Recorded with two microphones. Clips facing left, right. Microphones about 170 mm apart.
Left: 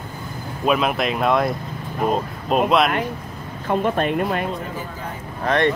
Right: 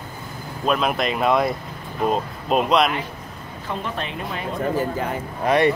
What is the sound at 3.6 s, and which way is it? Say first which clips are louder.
Speech: left 9 dB; 50° left (ahead or behind).